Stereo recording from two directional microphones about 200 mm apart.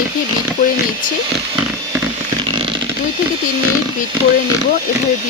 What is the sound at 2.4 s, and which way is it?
Chainsaw, 25° right (ahead or behind).